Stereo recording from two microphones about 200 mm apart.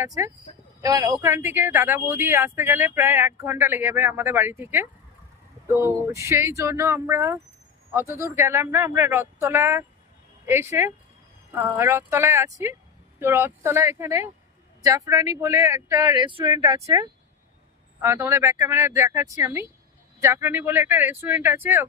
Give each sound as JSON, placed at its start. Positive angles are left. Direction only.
{"t": 0.0, "sound": "speech", "side_deg": -15}